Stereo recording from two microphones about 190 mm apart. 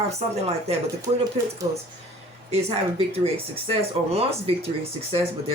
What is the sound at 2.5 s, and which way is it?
Speech, 30° right (ahead or behind).